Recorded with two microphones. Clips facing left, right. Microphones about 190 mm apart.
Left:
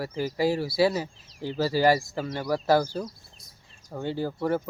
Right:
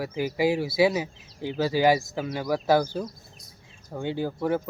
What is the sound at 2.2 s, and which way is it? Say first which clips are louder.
Speech: right 1 dB; 10° right (ahead or behind).